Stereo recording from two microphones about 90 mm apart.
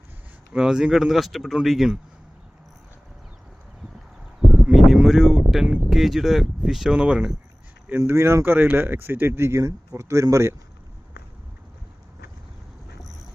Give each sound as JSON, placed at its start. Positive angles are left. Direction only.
{"t": 0.5, "sound": "speech", "side_deg": -5}
{"t": 4.6, "sound": "a sound", "side_deg": 0}
{"t": 5.9, "sound": "speech", "side_deg": 0}
{"t": 7.9, "sound": "speech", "side_deg": -25}